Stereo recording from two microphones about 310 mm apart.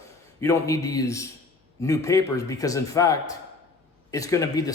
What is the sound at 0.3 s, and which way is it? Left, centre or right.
A man's voice, centre.